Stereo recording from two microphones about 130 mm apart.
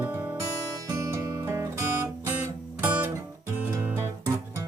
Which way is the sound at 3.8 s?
20° right (ahead or behind).